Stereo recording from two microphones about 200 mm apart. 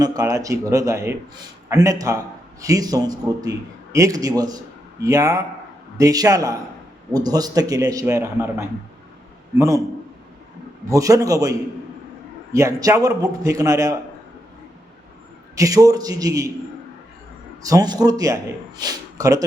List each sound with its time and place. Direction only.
0.0 s a man's voice: 15° right (ahead or behind)
10.8 s a man's voice: 15° right (ahead or behind)
12.5 s a man's voice: 15° right (ahead or behind)
15.5 s a man's voice: 15° right (ahead or behind)
17.6 s a man's voice: 15° right (ahead or behind)